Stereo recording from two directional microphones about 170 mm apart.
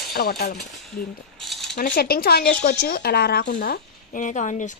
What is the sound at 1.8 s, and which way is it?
Speech, 60° left (ahead or behind).